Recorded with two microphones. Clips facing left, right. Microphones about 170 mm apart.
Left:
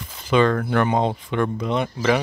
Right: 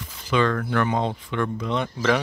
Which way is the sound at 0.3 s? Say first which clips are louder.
Left 4 dB; 25° left (ahead or behind).